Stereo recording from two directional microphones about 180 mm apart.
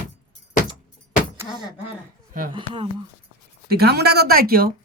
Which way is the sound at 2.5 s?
30° right (ahead or behind).